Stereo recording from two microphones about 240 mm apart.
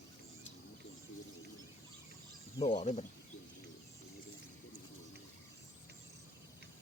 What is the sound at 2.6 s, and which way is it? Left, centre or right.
Speech, left.